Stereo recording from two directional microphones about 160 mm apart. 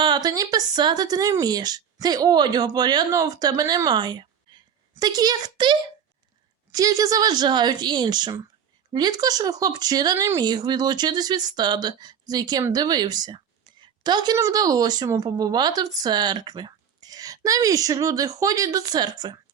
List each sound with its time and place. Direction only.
0.0 s a woman's voice: 25° right (ahead or behind)